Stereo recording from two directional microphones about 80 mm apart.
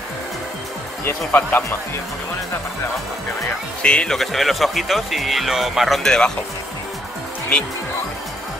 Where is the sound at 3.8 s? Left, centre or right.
Centre.